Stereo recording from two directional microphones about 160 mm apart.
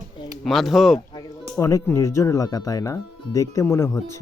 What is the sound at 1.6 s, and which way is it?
Speech, 20° left (ahead or behind).